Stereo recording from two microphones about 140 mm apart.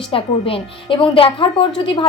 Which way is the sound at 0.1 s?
40° left (ahead or behind).